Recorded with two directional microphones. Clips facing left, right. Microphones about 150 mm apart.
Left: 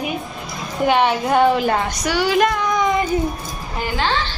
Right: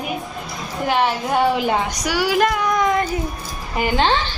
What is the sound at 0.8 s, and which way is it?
A woman's voice, centre (ahead or behind).